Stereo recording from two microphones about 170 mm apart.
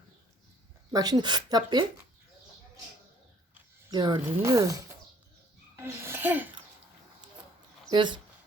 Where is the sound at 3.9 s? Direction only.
25° right (ahead or behind).